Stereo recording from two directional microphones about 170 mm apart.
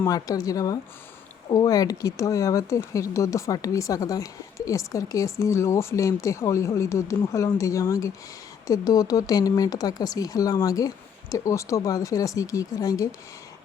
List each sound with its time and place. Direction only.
0.0 s speech: 20° left (ahead or behind)